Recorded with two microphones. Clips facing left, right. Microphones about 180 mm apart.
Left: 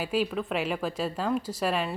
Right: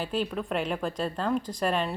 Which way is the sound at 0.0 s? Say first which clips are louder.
Left 2 dB; 5° left (ahead or behind).